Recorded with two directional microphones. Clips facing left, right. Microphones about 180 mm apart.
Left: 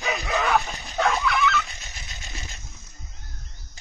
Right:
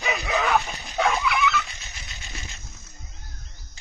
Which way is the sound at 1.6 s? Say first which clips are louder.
Left 1 dB; 40° left (ahead or behind).